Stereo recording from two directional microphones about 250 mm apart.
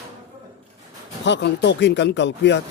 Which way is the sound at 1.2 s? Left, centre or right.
Left.